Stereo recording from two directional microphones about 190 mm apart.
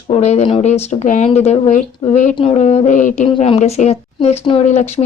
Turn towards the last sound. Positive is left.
turn(degrees=35)  # may be behind; listen again after turning